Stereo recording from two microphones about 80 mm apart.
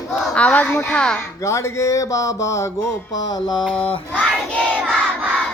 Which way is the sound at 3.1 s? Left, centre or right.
Left.